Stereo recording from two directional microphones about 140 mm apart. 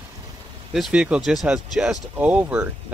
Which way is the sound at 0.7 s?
5° right (ahead or behind).